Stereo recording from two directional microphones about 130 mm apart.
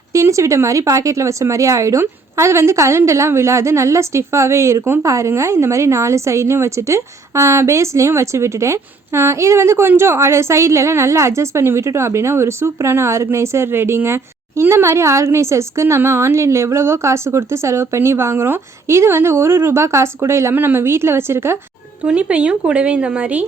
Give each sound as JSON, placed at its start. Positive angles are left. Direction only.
{"t": 0.1, "sound": "speech", "side_deg": -25}